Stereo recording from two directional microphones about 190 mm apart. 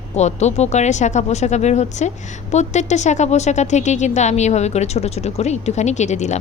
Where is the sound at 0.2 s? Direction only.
35° left (ahead or behind).